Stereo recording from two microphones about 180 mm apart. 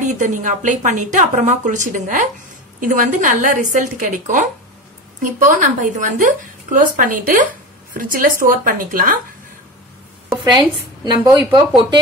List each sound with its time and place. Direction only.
0.0 s a woman's voice: 45° right (ahead or behind)
11.1 s speech: 20° right (ahead or behind)